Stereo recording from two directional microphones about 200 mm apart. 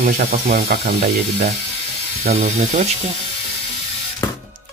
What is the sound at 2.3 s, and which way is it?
Speech, 35° right (ahead or behind).